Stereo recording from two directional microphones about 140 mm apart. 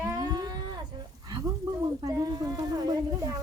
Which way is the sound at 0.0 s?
25° right (ahead or behind).